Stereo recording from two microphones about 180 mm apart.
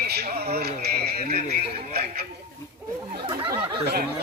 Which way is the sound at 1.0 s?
60° right (ahead or behind).